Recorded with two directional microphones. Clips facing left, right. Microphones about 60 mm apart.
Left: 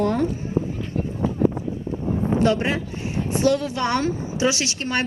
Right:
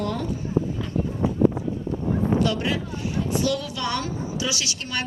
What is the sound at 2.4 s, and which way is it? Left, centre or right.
A woman's voice, left.